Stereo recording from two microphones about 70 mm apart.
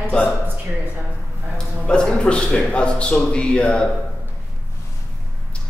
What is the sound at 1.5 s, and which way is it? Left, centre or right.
A man's voice, centre.